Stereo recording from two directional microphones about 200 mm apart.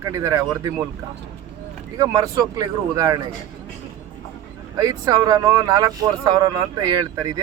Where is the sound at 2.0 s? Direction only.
20° right (ahead or behind).